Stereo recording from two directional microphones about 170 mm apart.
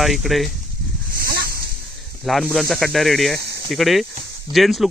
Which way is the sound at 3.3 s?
80° right.